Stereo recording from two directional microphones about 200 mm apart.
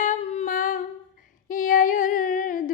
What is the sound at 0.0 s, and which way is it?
Humming, 35° left (ahead or behind).